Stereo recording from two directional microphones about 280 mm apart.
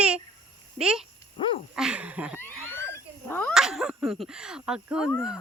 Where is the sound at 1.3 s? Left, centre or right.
Centre.